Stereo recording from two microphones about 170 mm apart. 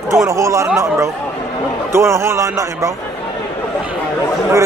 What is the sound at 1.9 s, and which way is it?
Speech, 15° right (ahead or behind).